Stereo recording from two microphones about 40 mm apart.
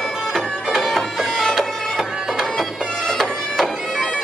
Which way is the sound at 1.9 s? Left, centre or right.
Centre.